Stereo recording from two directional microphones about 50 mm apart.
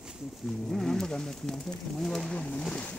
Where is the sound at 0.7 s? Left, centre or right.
Centre.